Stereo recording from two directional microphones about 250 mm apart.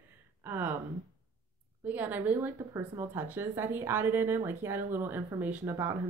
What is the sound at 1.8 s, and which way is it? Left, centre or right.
Speech, centre.